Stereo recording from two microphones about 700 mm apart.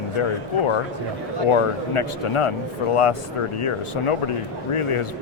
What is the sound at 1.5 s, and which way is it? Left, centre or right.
Speech, left.